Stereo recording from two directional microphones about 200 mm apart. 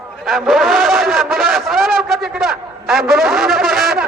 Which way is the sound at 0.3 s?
Centre (ahead or behind).